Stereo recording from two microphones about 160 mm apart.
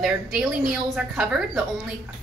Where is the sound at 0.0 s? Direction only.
5° right (ahead or behind).